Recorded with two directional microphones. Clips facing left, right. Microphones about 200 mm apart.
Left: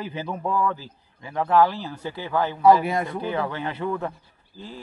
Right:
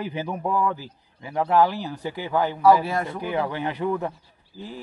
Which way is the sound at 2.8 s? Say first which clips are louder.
Left 1 dB; 20° left (ahead or behind).